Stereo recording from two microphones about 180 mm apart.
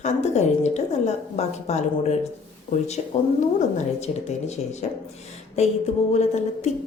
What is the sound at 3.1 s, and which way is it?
A woman's voice, 40° left (ahead or behind).